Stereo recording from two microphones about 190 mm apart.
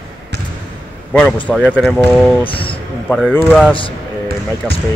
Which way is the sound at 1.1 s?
5° left (ahead or behind).